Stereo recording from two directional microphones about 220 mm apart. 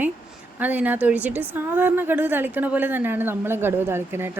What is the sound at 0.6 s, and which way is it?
A woman's voice, 5° right (ahead or behind).